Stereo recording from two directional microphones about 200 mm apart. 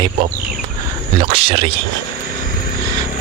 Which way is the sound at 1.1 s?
30° right (ahead or behind).